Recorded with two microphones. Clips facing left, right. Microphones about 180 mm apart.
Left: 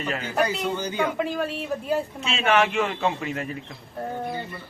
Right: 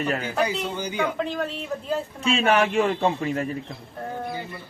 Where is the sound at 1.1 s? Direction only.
10° left (ahead or behind).